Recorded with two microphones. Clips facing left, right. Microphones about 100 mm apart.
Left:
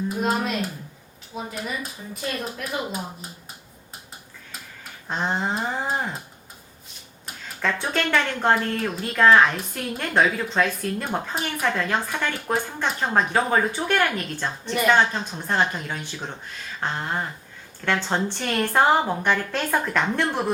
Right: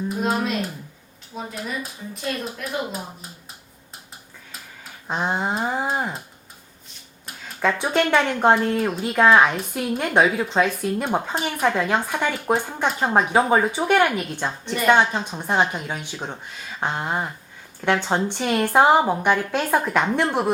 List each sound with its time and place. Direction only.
0.2 s a woman's voice: centre (ahead or behind)
5.0 s a woman's voice: 15° right (ahead or behind)
7.6 s a woman's voice: 10° right (ahead or behind)
14.7 s a woman's voice: centre (ahead or behind)
14.9 s a woman's voice: 15° right (ahead or behind)